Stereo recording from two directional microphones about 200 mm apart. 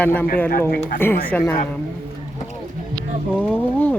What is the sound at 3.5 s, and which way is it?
Speech, 10° left (ahead or behind).